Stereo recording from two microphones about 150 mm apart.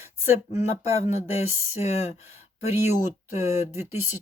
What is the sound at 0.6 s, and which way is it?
Speech, 45° left (ahead or behind).